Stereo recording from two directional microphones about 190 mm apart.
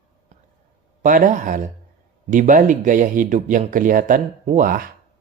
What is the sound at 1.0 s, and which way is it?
A man's voice, 45° right (ahead or behind).